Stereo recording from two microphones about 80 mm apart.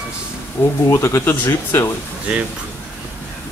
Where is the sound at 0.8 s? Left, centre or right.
Left.